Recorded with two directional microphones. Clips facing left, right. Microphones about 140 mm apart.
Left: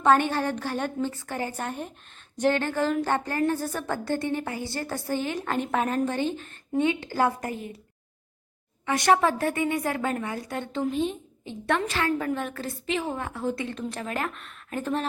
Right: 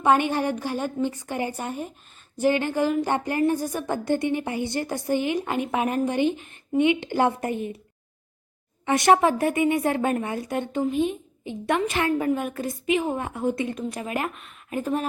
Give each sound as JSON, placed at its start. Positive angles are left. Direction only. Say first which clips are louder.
{"t": 0.0, "sound": "speech", "louder": "right 1 dB", "side_deg": -15}
{"t": 8.9, "sound": "a woman's voice", "louder": "right 3 dB", "side_deg": -20}